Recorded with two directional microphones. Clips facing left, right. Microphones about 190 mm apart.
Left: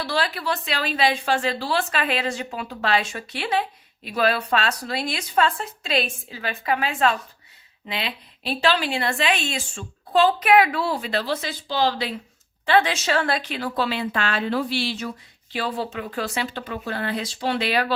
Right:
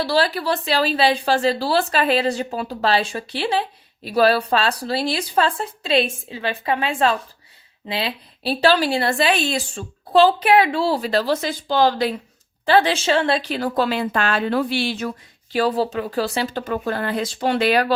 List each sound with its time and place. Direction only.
0.0 s a woman's voice: 35° right (ahead or behind)
12.6 s a woman's voice: 35° right (ahead or behind)
13.5 s speech: 45° right (ahead or behind)
15.5 s speech: 40° right (ahead or behind)